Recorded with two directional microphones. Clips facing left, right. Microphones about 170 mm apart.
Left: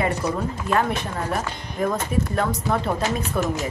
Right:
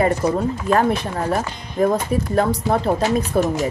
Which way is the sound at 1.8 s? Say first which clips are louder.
Right 5 dB; 35° right (ahead or behind).